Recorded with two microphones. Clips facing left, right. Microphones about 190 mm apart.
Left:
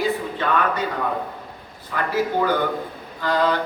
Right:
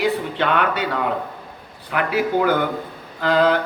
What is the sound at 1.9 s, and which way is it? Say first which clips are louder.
Speech: right 3 dB; 75° right (ahead or behind).